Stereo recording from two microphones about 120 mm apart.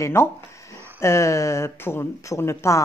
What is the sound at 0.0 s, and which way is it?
Speech, 25° left (ahead or behind).